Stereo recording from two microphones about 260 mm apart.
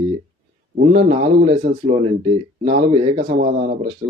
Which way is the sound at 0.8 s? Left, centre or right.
Right.